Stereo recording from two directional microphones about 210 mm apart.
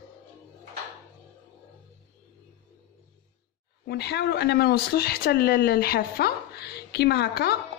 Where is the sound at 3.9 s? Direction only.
50° left (ahead or behind).